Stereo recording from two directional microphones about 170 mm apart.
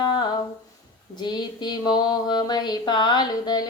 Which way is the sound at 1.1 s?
25° left (ahead or behind).